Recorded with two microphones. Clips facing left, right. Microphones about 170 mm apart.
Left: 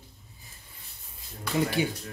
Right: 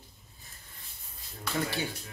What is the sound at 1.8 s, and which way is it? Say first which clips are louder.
Speech: left 7 dB; 20° left (ahead or behind).